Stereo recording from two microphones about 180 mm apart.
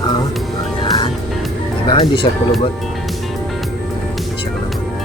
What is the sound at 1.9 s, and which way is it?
Speech, 25° left (ahead or behind).